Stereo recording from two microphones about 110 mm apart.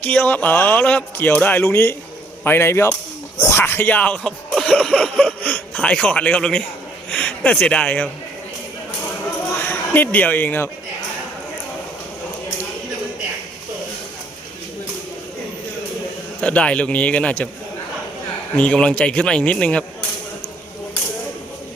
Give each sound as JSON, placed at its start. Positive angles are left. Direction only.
{"t": 0.0, "sound": "a man's voice", "side_deg": 15}
{"t": 9.6, "sound": "speech", "side_deg": 20}
{"t": 16.4, "sound": "a man's voice", "side_deg": 10}
{"t": 18.5, "sound": "a man's voice", "side_deg": 10}